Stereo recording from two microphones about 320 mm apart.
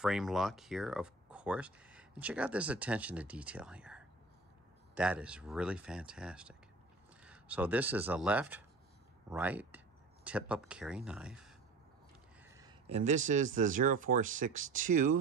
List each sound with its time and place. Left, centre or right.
0.0 s speech: centre
12.4 s a sound: centre
13.3 s speech: right